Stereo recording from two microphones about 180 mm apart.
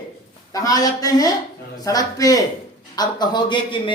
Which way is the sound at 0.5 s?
20° left (ahead or behind).